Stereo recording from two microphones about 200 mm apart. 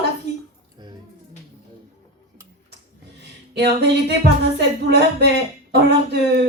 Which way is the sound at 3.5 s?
55° right (ahead or behind).